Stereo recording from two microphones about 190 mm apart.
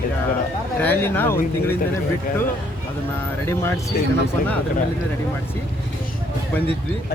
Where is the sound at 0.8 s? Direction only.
10° left (ahead or behind).